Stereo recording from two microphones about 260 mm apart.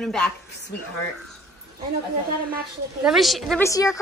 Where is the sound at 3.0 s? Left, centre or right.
Centre.